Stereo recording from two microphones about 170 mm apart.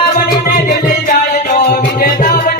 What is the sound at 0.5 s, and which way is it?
Music, 55° left (ahead or behind).